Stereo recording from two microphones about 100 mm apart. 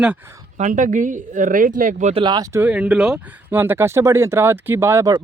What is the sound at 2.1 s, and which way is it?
Speech, 50° right (ahead or behind).